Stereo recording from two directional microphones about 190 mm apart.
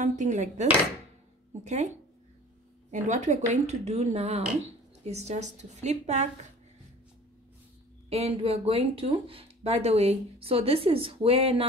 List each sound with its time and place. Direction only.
0.0 s speech: 40° right (ahead or behind)
8.1 s speech: 30° right (ahead or behind)